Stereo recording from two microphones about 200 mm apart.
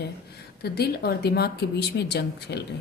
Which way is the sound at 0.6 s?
55° left (ahead or behind).